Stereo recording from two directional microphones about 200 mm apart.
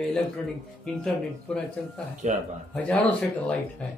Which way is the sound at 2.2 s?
35° right (ahead or behind).